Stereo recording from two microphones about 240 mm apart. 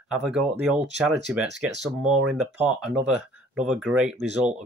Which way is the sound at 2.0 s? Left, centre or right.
Right.